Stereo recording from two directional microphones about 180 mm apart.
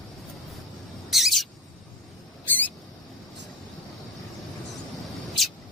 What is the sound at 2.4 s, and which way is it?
Mouse, 10° left (ahead or behind).